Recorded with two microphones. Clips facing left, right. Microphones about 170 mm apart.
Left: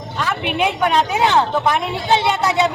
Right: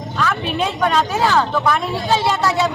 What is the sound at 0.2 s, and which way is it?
A man's voice, 20° left (ahead or behind).